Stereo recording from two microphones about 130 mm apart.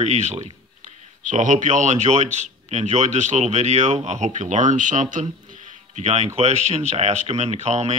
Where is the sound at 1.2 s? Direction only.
75° right (ahead or behind).